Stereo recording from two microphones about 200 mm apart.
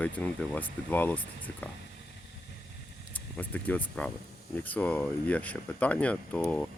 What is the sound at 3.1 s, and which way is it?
Speech, 10° left (ahead or behind).